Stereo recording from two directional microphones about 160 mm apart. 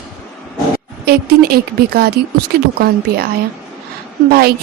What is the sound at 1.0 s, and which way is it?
Speech, 75° right (ahead or behind).